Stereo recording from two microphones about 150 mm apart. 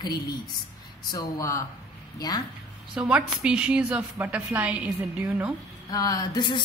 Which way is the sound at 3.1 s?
5° right (ahead or behind).